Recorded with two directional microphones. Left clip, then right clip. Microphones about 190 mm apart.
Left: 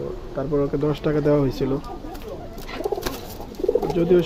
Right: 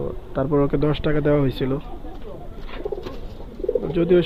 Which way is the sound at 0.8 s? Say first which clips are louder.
Even; 5° right (ahead or behind).